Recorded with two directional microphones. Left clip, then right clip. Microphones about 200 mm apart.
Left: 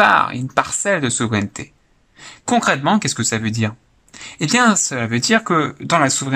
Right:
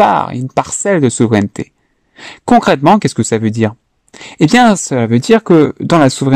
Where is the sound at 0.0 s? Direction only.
35° right (ahead or behind).